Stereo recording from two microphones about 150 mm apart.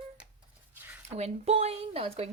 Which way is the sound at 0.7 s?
15° right (ahead or behind).